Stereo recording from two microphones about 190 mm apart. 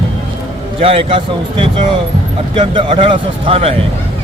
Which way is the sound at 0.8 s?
30° right (ahead or behind).